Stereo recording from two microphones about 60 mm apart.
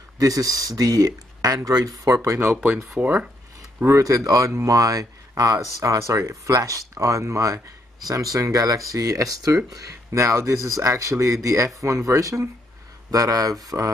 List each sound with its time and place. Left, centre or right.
0.2 s speech: right
3.0 s speech: right
3.8 s speech: right
8.1 s speech: right
13.1 s speech: right